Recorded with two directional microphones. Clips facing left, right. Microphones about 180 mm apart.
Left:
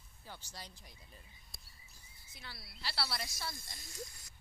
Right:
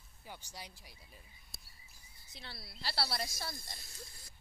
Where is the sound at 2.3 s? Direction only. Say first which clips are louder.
Right 2 dB; 35° right (ahead or behind).